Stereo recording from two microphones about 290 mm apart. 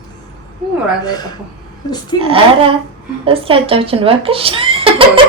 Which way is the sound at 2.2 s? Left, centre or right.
Centre.